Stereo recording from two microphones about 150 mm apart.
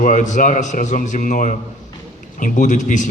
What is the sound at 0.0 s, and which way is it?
A man's voice, 60° left (ahead or behind).